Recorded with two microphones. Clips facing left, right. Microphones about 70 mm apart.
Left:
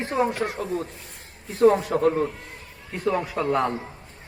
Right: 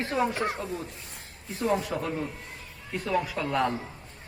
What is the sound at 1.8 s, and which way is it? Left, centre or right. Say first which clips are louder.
A man's voice: left 9 dB; left.